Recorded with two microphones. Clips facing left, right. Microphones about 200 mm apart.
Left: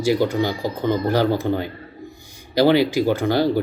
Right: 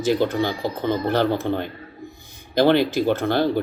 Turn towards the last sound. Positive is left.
turn(degrees=10)  # may be behind; listen again after turning